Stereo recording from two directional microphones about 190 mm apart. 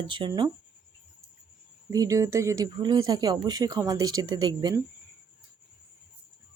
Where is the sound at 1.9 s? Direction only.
20° right (ahead or behind).